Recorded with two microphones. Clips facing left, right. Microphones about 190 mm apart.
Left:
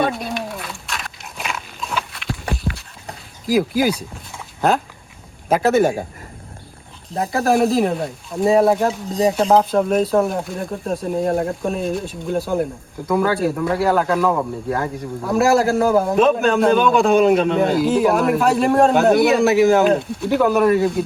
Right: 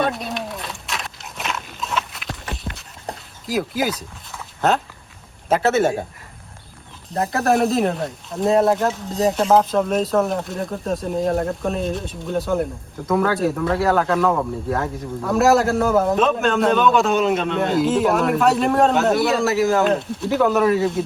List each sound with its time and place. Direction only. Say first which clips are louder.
0.0 s dog: left 2 dB; centre (ahead or behind)
3.4 s speech: left 5 dB; centre (ahead or behind)
4.3 s dog: left 1 dB; 10° left (ahead or behind)
5.5 s a man's voice: left 2 dB; 10° left (ahead or behind)
7.1 s speech: left 1 dB; centre (ahead or behind)
17.0 s a man's voice: left 4 dB; 50° left (ahead or behind)
17.6 s speech: left 2 dB; centre (ahead or behind)